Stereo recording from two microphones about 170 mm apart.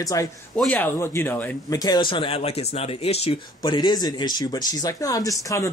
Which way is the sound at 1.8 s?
25° left (ahead or behind).